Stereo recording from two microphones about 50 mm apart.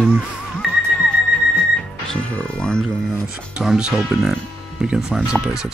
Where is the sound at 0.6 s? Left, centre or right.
Centre.